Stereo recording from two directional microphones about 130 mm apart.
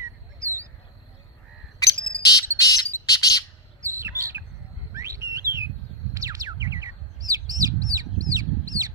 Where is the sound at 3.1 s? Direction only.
25° left (ahead or behind).